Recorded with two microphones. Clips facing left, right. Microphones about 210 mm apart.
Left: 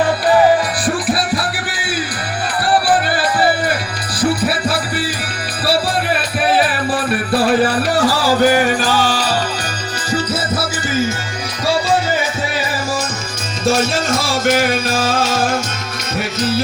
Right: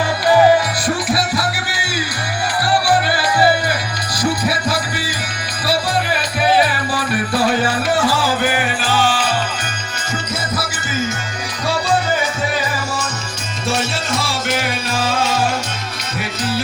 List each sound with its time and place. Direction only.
7.4 s music: 35° left (ahead or behind)
13.7 s music: 45° left (ahead or behind)